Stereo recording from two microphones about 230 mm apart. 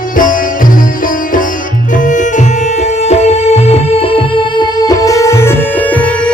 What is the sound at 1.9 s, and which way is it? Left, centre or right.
Music, left.